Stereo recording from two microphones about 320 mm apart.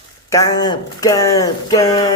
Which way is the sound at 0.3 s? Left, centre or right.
Centre.